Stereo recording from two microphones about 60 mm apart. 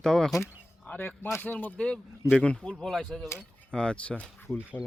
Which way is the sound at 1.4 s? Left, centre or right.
Left.